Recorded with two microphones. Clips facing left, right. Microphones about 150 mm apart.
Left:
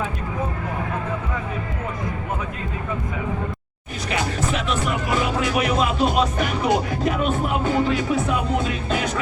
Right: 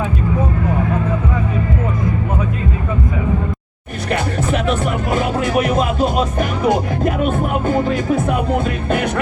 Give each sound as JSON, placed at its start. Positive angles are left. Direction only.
{"t": 4.1, "sound": "music", "side_deg": -55}